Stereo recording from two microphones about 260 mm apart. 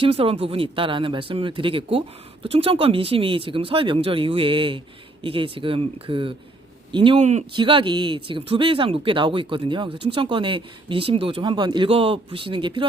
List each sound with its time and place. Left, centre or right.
0.0 s speech: right